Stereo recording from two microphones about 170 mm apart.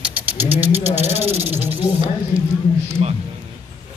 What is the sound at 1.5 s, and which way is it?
Snake, 10° right (ahead or behind).